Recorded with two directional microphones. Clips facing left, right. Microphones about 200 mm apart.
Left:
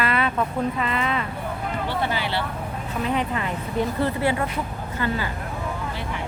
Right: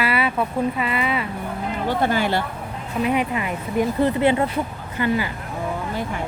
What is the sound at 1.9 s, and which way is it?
Speech, 45° right (ahead or behind).